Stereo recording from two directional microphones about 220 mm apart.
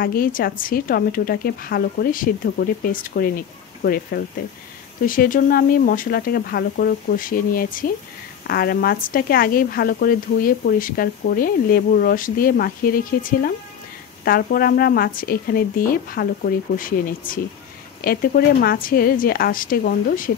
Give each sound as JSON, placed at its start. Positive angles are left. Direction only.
{"t": 0.0, "sound": "a woman's voice", "side_deg": 40}